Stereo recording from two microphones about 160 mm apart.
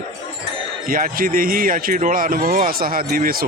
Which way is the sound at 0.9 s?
60° right (ahead or behind).